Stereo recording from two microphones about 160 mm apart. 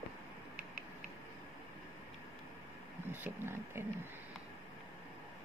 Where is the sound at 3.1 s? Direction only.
15° right (ahead or behind).